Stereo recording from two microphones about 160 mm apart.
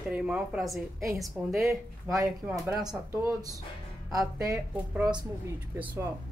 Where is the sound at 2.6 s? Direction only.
5° right (ahead or behind).